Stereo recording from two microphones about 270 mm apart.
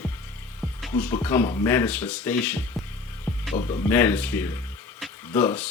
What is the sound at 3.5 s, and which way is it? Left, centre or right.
Speech, left.